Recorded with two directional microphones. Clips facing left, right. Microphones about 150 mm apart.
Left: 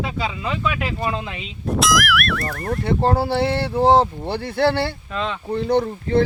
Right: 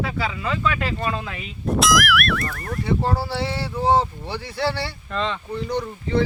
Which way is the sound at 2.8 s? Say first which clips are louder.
Left 3 dB; 55° left (ahead or behind).